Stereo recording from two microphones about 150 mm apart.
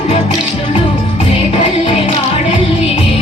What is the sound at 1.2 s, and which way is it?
Music, 40° left (ahead or behind).